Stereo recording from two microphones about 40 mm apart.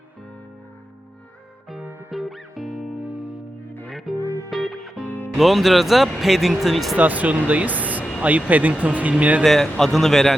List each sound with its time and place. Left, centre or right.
2.0 s music: centre
4.1 s music: centre
5.0 s music: left
5.4 s speech: centre
6.9 s speech: right
9.4 s a man's voice: centre